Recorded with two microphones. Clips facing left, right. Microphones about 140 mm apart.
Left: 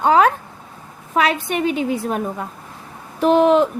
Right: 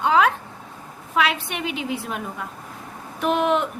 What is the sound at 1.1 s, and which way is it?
A woman's voice, 40° left (ahead or behind).